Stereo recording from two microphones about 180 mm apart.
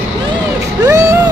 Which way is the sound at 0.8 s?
20° right (ahead or behind).